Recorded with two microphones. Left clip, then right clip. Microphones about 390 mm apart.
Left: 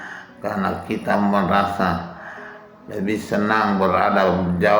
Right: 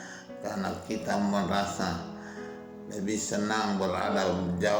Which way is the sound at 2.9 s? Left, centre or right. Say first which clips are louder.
Left 9 dB; right.